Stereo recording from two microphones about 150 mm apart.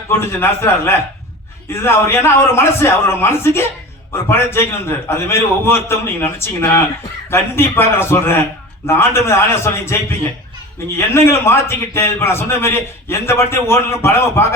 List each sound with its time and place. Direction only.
0.3 s a man's voice: 15° left (ahead or behind)
10.9 s a man's voice: 15° left (ahead or behind)